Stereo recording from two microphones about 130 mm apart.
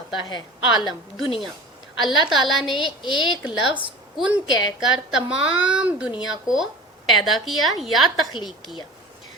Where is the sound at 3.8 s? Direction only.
10° right (ahead or behind).